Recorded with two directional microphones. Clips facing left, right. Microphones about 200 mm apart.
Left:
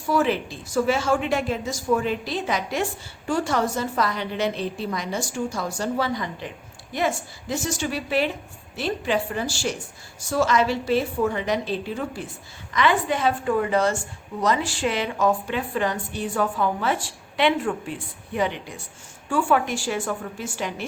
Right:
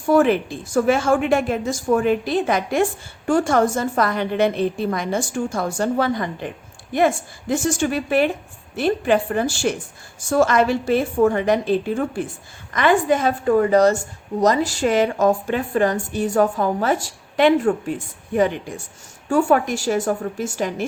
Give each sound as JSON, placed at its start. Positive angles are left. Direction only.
{"t": 0.1, "sound": "a woman's voice", "side_deg": -55}